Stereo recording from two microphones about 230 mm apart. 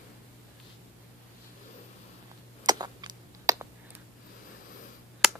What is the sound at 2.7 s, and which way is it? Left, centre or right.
Typing, centre.